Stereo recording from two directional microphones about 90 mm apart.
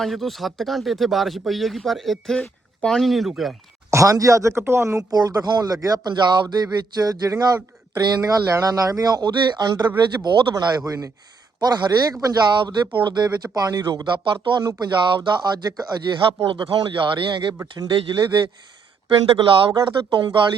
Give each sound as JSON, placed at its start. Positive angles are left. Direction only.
{"t": 0.0, "sound": "speech", "side_deg": 0}
{"t": 3.9, "sound": "speech", "side_deg": -40}
{"t": 5.1, "sound": "speech", "side_deg": -45}
{"t": 10.8, "sound": "speech", "side_deg": -40}
{"t": 16.5, "sound": "speech", "side_deg": -65}
{"t": 19.0, "sound": "speech", "side_deg": -75}
{"t": 20.1, "sound": "speech", "side_deg": -55}